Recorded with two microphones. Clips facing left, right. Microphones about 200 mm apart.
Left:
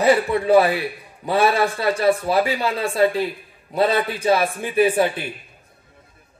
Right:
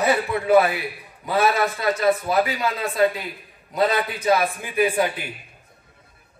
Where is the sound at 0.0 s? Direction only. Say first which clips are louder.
Left 4 dB; 30° left (ahead or behind).